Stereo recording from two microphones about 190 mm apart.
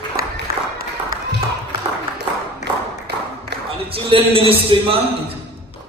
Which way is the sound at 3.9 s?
30° right (ahead or behind).